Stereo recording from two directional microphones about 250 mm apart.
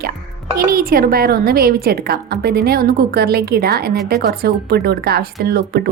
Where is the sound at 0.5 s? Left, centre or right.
Right.